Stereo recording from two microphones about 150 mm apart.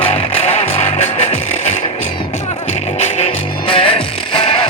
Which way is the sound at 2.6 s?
45° left (ahead or behind).